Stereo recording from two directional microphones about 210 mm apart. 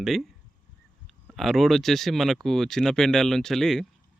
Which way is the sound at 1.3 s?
Centre (ahead or behind).